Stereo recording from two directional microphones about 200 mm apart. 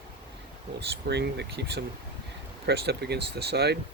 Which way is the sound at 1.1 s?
55° right (ahead or behind).